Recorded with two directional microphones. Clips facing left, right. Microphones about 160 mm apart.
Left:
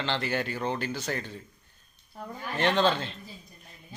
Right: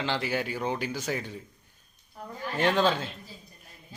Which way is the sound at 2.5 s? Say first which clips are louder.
Even; 10° right (ahead or behind).